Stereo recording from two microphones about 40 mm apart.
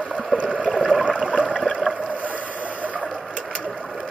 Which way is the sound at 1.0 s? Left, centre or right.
Right.